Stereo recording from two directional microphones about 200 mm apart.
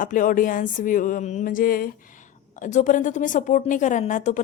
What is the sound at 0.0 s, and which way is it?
A woman's voice, 40° left (ahead or behind).